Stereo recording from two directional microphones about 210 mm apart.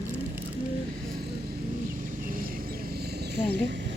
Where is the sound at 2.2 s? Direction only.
40° right (ahead or behind).